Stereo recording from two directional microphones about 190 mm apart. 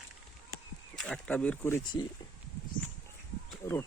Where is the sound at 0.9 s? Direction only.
5° left (ahead or behind).